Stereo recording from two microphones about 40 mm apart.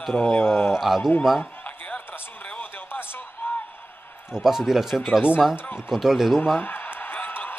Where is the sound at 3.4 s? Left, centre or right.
Left.